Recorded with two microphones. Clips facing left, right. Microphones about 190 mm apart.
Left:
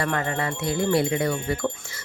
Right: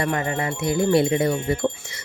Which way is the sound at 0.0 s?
20° right (ahead or behind).